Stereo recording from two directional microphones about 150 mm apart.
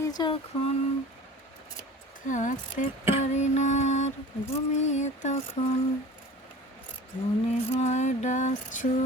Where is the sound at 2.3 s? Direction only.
55° left (ahead or behind).